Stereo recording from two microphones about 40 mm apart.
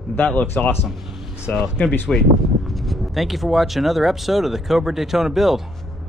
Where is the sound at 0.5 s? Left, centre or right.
Left.